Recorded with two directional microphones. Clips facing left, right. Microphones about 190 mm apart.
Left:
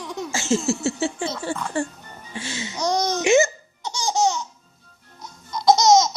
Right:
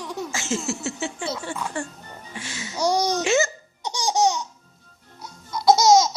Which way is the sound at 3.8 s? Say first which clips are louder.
Even; 15° right (ahead or behind).